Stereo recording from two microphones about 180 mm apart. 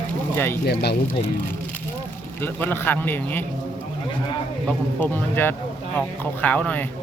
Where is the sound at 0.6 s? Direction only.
65° left (ahead or behind).